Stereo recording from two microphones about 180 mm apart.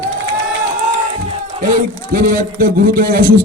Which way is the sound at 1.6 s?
50° right (ahead or behind).